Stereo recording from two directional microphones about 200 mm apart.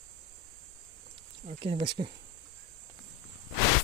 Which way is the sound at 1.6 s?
25° right (ahead or behind).